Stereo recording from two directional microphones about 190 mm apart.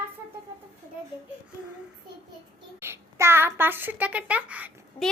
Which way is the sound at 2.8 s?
15° right (ahead or behind).